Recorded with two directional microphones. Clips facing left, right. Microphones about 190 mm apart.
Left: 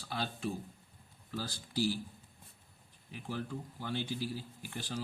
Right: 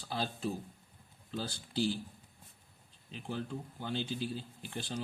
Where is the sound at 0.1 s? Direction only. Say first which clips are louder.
Right 1 dB; 35° right (ahead or behind).